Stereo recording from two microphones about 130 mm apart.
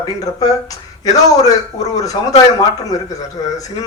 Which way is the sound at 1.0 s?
25° left (ahead or behind).